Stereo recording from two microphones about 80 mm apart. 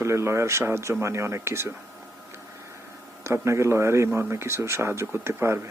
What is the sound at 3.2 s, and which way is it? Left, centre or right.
Speech, right.